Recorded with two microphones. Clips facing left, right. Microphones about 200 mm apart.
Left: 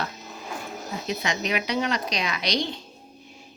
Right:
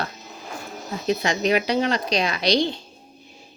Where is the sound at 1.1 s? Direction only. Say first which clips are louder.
Right 7 dB; 35° right (ahead or behind).